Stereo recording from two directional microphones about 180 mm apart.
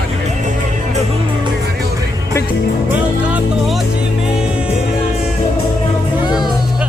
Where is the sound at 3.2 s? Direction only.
5° right (ahead or behind).